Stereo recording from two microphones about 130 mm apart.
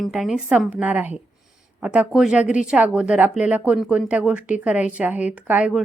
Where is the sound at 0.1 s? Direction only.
5° right (ahead or behind).